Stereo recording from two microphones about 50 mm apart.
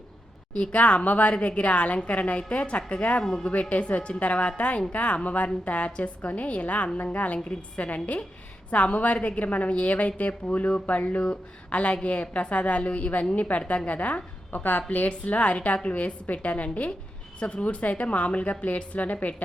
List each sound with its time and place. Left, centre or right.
0.5 s a woman's voice: left